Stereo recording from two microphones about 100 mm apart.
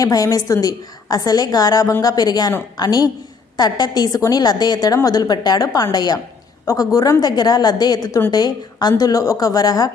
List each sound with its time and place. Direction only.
0.0 s a woman's voice: 35° left (ahead or behind)